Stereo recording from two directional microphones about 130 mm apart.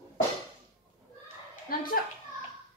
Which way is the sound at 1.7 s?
90° left.